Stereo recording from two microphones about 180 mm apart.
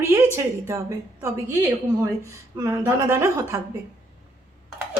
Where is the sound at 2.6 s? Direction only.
15° right (ahead or behind).